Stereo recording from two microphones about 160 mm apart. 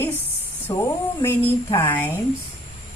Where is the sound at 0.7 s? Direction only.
15° left (ahead or behind).